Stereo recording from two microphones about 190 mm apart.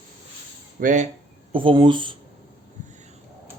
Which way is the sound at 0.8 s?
45° right (ahead or behind).